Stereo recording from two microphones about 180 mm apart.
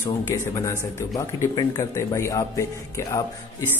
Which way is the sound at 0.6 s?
20° left (ahead or behind).